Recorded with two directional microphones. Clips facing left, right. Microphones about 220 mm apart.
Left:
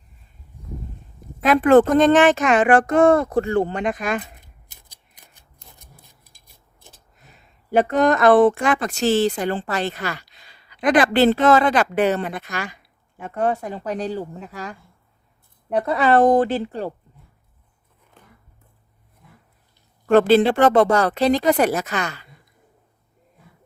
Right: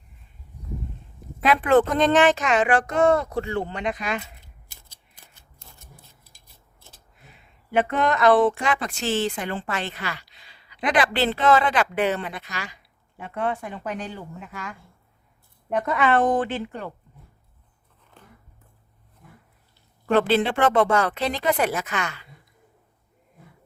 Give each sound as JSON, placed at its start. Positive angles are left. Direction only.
{"t": 1.5, "sound": "a child's voice", "side_deg": 45}
{"t": 4.4, "sound": "shuffling cards", "side_deg": 15}
{"t": 7.2, "sound": "speech", "side_deg": 40}
{"t": 13.2, "sound": "speech", "side_deg": 40}
{"t": 20.1, "sound": "speech", "side_deg": 45}